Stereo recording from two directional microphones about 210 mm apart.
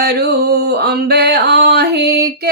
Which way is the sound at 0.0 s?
50° right (ahead or behind).